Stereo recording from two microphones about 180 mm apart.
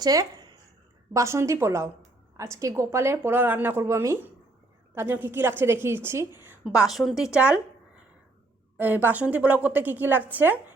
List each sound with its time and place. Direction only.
0.0 s a woman's voice: 20° right (ahead or behind)
6.7 s a woman's voice: centre (ahead or behind)
8.8 s a woman's voice: 10° right (ahead or behind)